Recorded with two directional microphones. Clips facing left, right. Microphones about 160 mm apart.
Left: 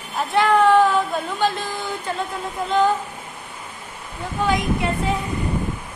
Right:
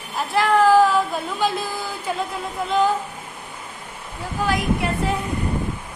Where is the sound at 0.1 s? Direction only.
Centre (ahead or behind).